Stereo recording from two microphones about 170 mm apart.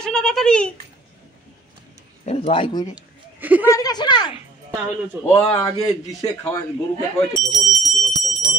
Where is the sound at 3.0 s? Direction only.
10° right (ahead or behind).